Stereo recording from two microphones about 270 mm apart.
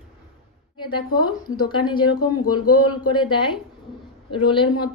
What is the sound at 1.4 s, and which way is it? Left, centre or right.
A woman's voice, centre.